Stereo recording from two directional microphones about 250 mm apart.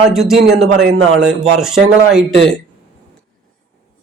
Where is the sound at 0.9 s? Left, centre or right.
Right.